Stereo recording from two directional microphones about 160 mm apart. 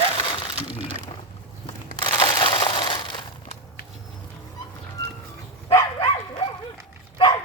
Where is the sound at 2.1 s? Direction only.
25° left (ahead or behind).